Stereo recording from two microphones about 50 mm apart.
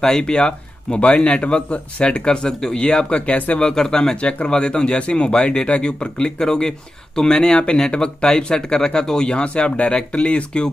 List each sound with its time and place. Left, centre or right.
0.0 s a man's voice: centre